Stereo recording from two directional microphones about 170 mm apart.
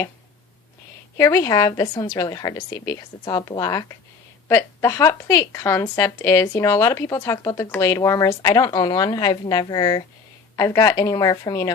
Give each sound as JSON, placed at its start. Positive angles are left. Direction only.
{"t": 1.1, "sound": "a woman's voice", "side_deg": 15}